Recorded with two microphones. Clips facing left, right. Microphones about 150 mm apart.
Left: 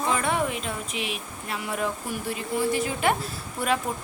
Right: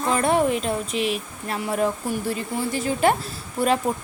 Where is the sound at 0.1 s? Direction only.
40° right (ahead or behind).